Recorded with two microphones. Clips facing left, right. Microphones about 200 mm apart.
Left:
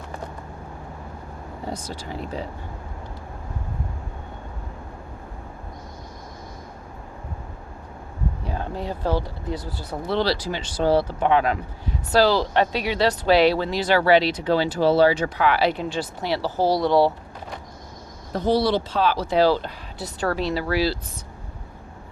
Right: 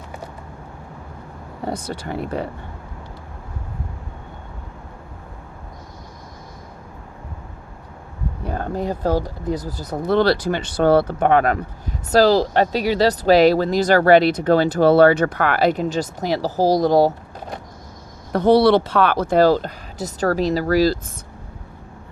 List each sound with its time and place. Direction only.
1.6 s speech: 65° right (ahead or behind)
8.4 s speech: 50° right (ahead or behind)
18.3 s speech: 65° right (ahead or behind); by 21.0 s 45° right (ahead or behind)